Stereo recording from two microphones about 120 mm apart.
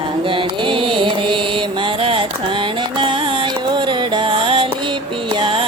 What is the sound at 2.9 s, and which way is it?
Music, 45° right (ahead or behind).